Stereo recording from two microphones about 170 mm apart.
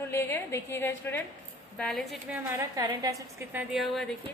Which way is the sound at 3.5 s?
Centre (ahead or behind).